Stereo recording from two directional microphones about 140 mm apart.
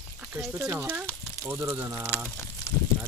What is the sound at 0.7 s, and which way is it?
Speech, 15° right (ahead or behind).